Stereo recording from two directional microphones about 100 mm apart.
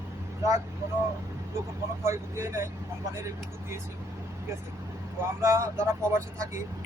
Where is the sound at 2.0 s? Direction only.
30° right (ahead or behind).